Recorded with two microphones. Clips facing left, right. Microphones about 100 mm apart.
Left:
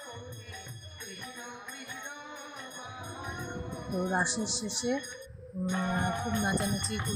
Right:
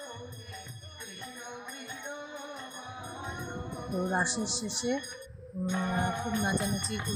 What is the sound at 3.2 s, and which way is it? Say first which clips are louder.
Music: even; 15° right (ahead or behind).